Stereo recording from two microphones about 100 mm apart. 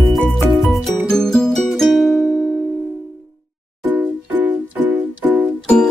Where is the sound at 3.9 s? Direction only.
15° right (ahead or behind).